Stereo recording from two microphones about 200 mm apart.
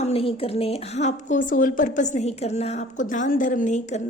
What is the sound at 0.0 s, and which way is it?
A woman's voice, 30° left (ahead or behind).